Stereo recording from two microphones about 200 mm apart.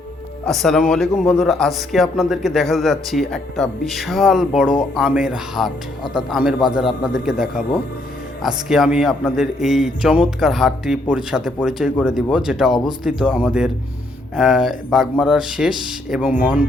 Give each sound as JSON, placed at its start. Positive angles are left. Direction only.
{"t": 0.4, "sound": "speech", "side_deg": 0}